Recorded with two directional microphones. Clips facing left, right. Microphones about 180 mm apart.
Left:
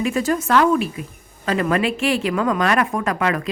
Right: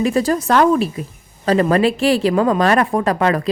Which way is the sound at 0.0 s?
35° right (ahead or behind).